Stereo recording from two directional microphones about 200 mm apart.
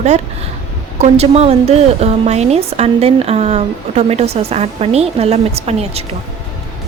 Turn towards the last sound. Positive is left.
turn(degrees=-30)  # may be behind; listen again after turning